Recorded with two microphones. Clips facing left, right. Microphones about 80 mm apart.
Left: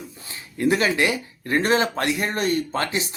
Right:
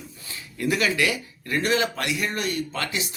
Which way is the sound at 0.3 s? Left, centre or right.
Left.